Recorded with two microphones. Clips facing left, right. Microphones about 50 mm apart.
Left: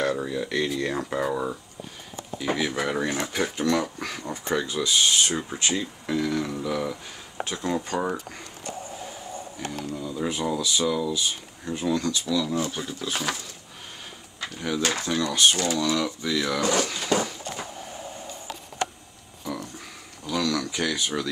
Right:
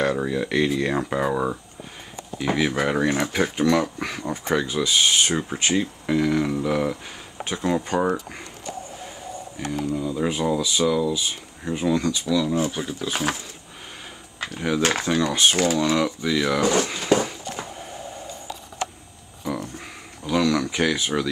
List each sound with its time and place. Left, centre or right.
0.0 s speech: centre
9.7 s speech: centre; by 13.4 s right
14.9 s speech: right
20.2 s a sound: right